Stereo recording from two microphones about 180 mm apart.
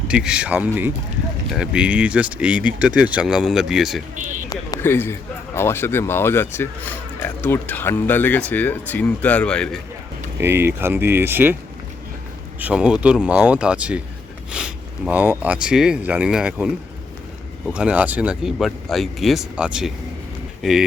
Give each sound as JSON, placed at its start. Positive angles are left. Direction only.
{"t": 0.1, "sound": "speech", "side_deg": -5}
{"t": 4.1, "sound": "speech", "side_deg": -45}
{"t": 4.4, "sound": "a sound", "side_deg": 15}
{"t": 5.5, "sound": "speech", "side_deg": 15}
{"t": 10.4, "sound": "speech", "side_deg": -15}
{"t": 12.5, "sound": "speech", "side_deg": -5}